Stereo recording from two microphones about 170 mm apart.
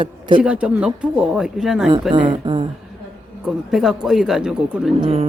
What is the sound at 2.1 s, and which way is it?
Speech, 25° right (ahead or behind).